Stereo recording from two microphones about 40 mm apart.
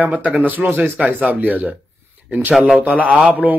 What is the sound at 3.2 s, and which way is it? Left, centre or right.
Speech, right.